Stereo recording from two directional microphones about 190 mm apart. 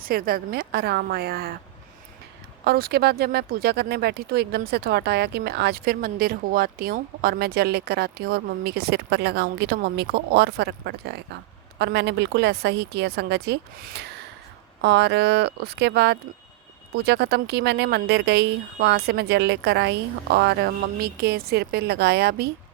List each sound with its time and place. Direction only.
0.0 s speech: 50° right (ahead or behind)
2.6 s speech: 55° right (ahead or behind)